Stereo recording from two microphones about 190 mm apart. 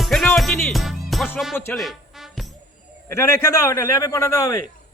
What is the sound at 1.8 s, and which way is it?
Music, centre (ahead or behind).